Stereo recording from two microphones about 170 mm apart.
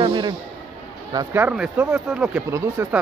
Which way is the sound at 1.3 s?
10° right (ahead or behind).